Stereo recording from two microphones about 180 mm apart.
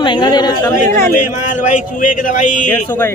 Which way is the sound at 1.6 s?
45° left (ahead or behind).